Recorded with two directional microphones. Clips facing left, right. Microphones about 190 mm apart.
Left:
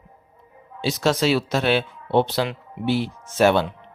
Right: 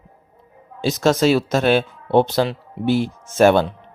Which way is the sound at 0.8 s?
45° right (ahead or behind).